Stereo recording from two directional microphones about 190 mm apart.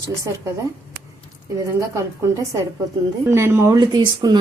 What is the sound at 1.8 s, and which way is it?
A woman's voice, 15° right (ahead or behind).